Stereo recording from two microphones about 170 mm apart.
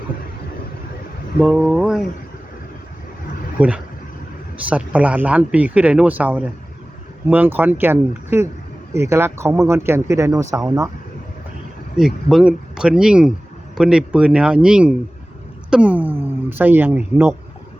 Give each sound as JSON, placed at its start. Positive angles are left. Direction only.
{"t": 1.4, "sound": "speech", "side_deg": -10}
{"t": 3.6, "sound": "speech", "side_deg": -10}
{"t": 11.9, "sound": "speech", "side_deg": -5}